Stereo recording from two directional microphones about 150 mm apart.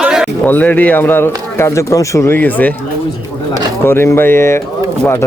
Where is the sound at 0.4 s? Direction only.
10° left (ahead or behind).